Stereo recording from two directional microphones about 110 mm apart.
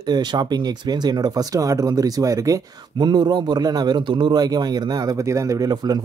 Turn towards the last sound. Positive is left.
turn(degrees=-35)  # may be behind; listen again after turning